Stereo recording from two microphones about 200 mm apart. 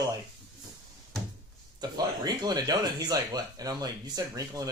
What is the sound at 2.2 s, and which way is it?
Speech, 20° right (ahead or behind).